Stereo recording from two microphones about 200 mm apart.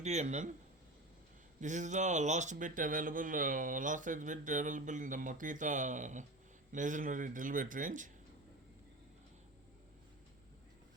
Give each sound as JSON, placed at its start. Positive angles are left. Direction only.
{"t": 0.0, "sound": "speech", "side_deg": -35}
{"t": 1.6, "sound": "speech", "side_deg": -35}